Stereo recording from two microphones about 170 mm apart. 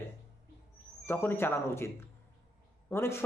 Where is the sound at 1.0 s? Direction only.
15° left (ahead or behind).